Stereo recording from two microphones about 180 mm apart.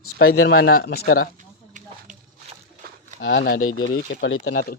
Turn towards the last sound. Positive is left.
turn(degrees=55)  # may be behind; listen again after turning